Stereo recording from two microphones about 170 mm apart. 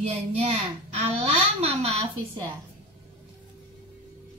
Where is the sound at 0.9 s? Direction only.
35° right (ahead or behind).